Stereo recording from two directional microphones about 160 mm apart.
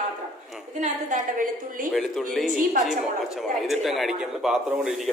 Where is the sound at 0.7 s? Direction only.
50° right (ahead or behind).